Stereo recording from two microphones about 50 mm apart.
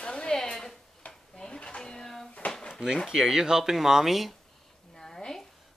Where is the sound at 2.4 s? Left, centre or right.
Centre.